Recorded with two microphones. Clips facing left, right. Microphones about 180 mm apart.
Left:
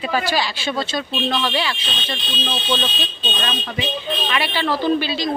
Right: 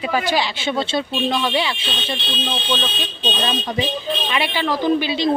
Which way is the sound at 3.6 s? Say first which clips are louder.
Right 3 dB; 35° right (ahead or behind).